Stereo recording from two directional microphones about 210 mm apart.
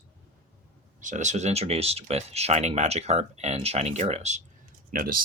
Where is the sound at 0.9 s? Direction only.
35° right (ahead or behind).